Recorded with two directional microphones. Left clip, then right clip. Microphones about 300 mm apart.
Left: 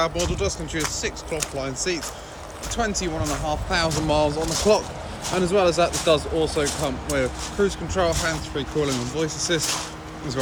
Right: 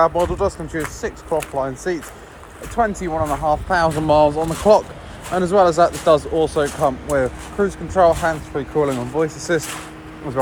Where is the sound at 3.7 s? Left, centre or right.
Centre.